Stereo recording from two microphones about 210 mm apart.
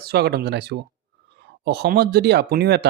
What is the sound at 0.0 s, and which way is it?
Speech, 50° right (ahead or behind).